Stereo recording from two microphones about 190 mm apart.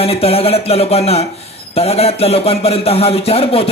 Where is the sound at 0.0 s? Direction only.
30° left (ahead or behind).